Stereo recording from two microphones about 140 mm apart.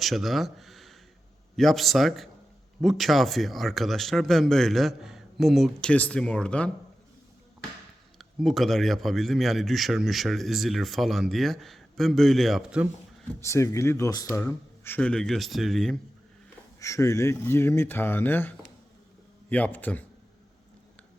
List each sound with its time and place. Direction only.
0.0 s a man's voice: centre (ahead or behind)
8.2 s a man's voice: centre (ahead or behind)
13.4 s a man's voice: 20° left (ahead or behind); by 16.0 s centre (ahead or behind)
16.8 s a man's voice: 20° left (ahead or behind)